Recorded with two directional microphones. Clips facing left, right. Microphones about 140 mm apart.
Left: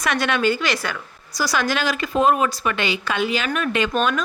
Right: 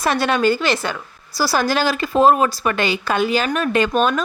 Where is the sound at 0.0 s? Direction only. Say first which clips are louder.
Right 3 dB; 35° right (ahead or behind).